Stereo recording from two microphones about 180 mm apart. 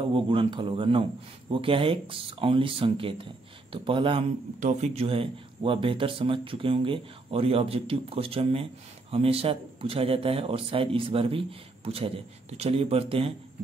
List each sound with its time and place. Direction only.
0.1 s speech: 30° right (ahead or behind)
4.6 s speech: 40° right (ahead or behind)